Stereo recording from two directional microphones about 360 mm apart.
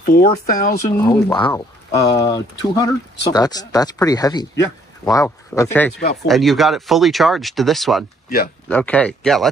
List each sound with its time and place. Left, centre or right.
0.2 s speech: centre
0.8 s speech: centre